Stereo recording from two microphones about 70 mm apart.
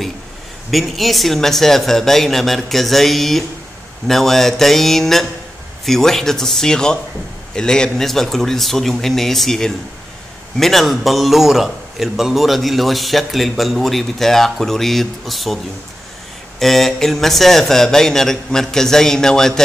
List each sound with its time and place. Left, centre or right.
0.7 s a man's voice: centre